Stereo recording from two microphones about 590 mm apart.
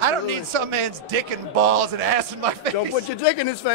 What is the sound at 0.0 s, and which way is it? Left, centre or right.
A man's voice, right.